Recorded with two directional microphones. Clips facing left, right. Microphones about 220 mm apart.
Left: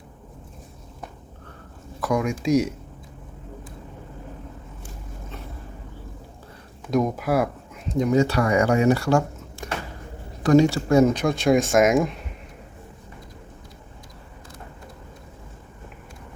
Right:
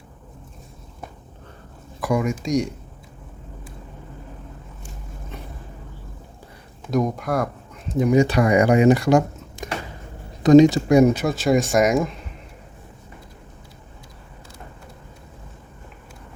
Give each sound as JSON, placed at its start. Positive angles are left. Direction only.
{"t": 2.0, "sound": "speech", "side_deg": -10}
{"t": 6.9, "sound": "speech", "side_deg": 5}
{"t": 7.9, "sound": "speech", "side_deg": -10}